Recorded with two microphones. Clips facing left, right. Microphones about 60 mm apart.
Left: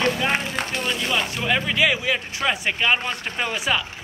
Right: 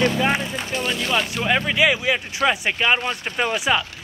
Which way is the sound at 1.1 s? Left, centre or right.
Centre.